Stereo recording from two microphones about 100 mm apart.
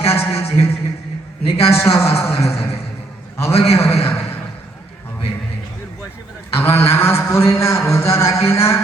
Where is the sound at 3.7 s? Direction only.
25° left (ahead or behind).